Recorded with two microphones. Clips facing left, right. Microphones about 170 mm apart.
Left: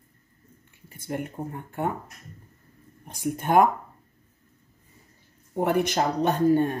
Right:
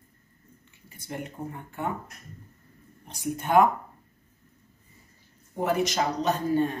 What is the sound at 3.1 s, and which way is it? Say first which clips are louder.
Speech: left 1 dB; 50° left (ahead or behind).